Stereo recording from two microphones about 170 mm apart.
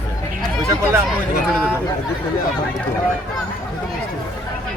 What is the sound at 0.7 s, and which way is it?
Speech, 15° right (ahead or behind).